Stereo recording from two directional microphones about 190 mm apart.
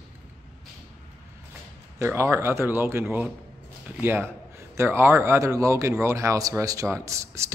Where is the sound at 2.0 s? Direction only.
15° right (ahead or behind).